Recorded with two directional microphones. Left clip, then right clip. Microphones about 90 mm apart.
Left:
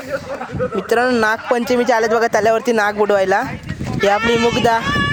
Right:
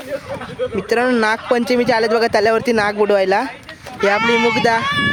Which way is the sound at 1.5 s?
30° right (ahead or behind).